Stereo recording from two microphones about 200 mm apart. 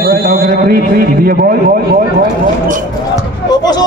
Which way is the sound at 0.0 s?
50° right (ahead or behind).